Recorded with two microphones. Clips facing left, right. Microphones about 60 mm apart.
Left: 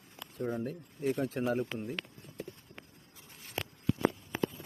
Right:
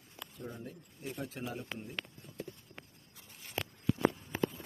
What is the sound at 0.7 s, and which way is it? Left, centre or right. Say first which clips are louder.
Speech: left 11 dB; left.